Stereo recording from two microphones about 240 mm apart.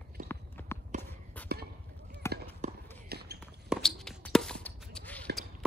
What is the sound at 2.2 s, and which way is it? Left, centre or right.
Run, centre.